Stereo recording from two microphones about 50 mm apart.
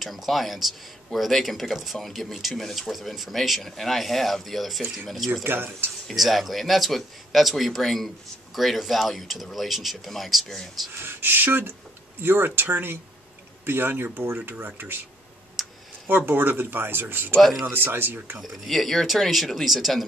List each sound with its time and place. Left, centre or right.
0.0 s speech: centre
5.4 s speech: right
6.1 s speech: centre
10.9 s speech: right
15.6 s clicking: centre
16.3 s speech: right
17.4 s speech: centre
17.7 s speech: right
18.4 s speech: centre